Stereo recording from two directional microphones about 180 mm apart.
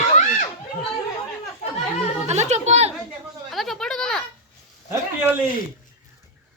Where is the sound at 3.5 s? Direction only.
Centre (ahead or behind).